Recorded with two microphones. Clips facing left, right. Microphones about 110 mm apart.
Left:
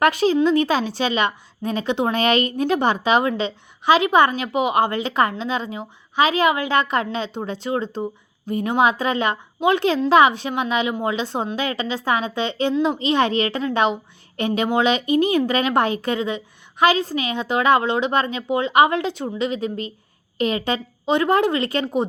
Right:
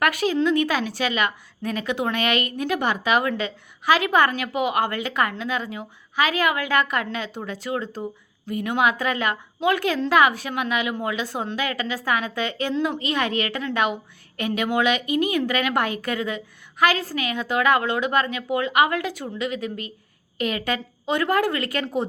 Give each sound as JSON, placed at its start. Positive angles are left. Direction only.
{"t": 0.0, "sound": "a woman's voice", "side_deg": 30}